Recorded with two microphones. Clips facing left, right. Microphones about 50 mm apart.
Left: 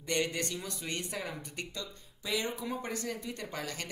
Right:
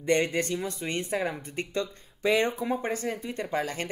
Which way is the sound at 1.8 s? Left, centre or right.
Right.